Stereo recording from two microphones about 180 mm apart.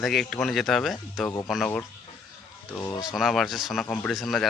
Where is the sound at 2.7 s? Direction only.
20° left (ahead or behind).